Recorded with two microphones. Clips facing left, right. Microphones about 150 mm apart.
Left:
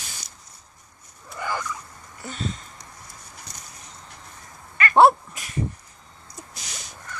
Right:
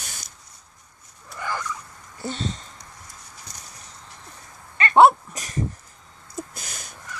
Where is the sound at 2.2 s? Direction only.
35° right (ahead or behind).